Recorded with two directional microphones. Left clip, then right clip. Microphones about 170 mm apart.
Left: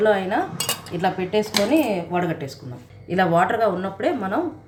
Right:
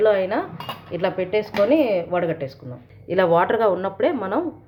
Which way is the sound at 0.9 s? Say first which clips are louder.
Right 1 dB; 45° right (ahead or behind).